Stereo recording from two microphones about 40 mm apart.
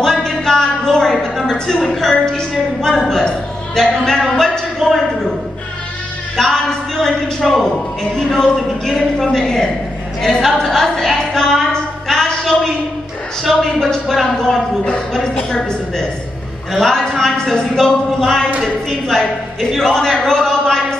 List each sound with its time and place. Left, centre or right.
0.0 s a sound: centre
2.1 s a woman's voice: centre
6.3 s a woman's voice: centre